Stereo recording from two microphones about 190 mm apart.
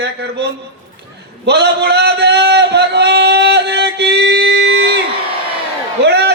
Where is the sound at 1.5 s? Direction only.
60° right (ahead or behind).